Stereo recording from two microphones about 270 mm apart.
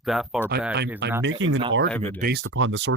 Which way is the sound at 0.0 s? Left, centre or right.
Centre.